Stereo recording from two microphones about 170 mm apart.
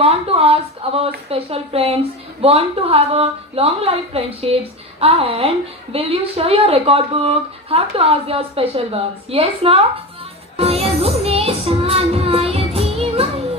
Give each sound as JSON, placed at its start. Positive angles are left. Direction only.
{"t": 0.0, "sound": "a sound", "side_deg": -35}
{"t": 2.4, "sound": "a woman's voice", "side_deg": -35}
{"t": 10.6, "sound": "music", "side_deg": -35}